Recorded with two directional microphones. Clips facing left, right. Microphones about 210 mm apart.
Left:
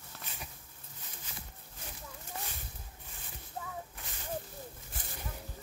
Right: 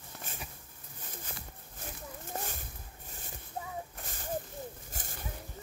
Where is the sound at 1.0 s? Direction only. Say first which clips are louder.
Right 5 dB; 50° right (ahead or behind).